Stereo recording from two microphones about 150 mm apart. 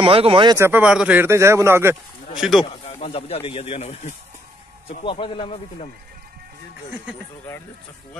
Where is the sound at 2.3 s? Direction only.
Centre (ahead or behind).